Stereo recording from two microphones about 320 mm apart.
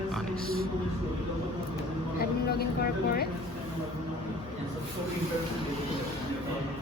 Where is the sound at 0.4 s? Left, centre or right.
Right.